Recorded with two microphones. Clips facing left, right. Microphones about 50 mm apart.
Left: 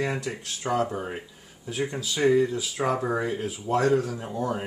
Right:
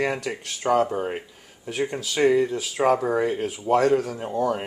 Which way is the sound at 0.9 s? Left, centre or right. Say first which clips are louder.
Right 5 dB; right.